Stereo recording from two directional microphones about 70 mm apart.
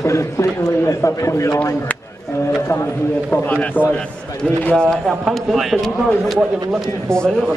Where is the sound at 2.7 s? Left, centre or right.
Left; by 5.7 s centre.